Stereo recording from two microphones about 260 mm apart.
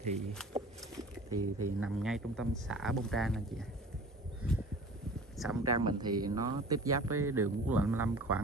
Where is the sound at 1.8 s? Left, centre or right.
Centre.